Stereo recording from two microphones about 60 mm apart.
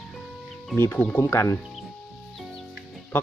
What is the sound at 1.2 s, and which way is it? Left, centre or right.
Speech, left.